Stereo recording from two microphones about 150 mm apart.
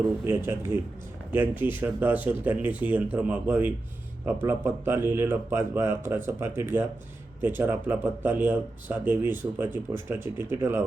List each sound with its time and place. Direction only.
0.3 s speech: 15° right (ahead or behind)